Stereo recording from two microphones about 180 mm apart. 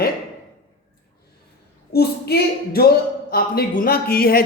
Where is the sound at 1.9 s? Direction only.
60° left (ahead or behind).